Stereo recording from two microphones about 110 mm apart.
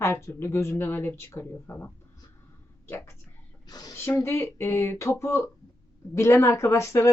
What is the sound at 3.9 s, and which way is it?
Speech, 25° left (ahead or behind).